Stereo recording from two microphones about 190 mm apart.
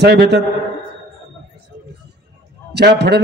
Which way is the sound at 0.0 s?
60° right (ahead or behind).